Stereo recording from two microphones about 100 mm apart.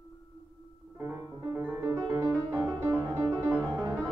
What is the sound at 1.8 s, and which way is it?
Music, 30° right (ahead or behind).